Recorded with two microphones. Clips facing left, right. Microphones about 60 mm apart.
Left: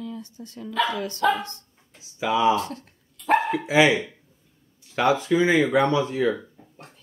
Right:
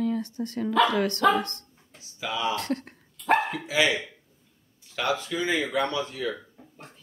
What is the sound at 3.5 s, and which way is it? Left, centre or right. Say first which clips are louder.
Speech: left 6 dB; left.